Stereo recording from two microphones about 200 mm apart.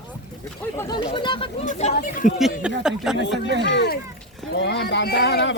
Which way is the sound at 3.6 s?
60° left (ahead or behind).